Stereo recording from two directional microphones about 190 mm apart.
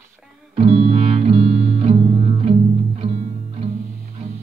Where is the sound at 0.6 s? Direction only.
30° right (ahead or behind).